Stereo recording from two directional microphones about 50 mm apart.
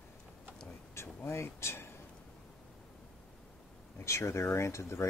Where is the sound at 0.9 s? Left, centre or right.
Left.